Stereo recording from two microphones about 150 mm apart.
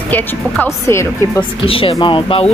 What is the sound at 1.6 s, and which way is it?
Speech, 35° left (ahead or behind).